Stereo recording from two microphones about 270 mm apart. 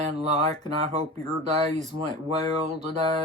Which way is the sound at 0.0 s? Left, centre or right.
Right.